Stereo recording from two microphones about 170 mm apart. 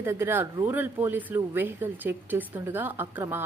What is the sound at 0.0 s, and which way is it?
Speech, 15° right (ahead or behind).